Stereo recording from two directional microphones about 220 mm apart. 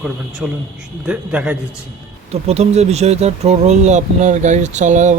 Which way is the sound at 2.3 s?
30° right (ahead or behind).